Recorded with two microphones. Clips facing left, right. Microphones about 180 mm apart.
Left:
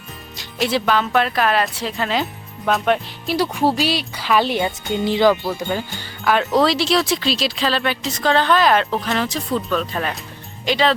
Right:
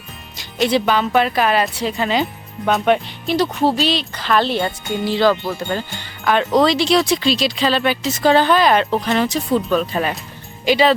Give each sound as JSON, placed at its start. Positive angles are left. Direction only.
{"t": 0.3, "sound": "speech", "side_deg": 0}
{"t": 3.3, "sound": "speech", "side_deg": 10}